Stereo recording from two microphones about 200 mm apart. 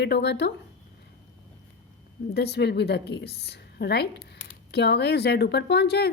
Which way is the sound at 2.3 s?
55° left (ahead or behind).